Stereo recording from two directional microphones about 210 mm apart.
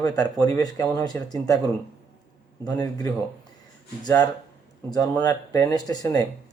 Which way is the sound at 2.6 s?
15° left (ahead or behind).